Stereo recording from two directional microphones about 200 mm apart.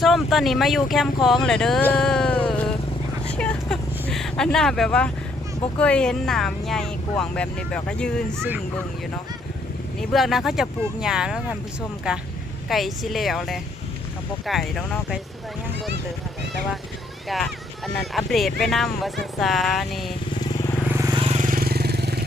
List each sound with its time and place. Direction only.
0.0 s speech: centre (ahead or behind)
3.3 s a sound: 5° left (ahead or behind)
5.8 s speech: 5° left (ahead or behind)
10.0 s speech: centre (ahead or behind)
17.2 s speech: centre (ahead or behind)
20.4 s vehicle: 15° left (ahead or behind)
20.8 s vehicle: 10° right (ahead or behind)
21.2 s vehicle: 35° right (ahead or behind); by 22.2 s 55° right (ahead or behind)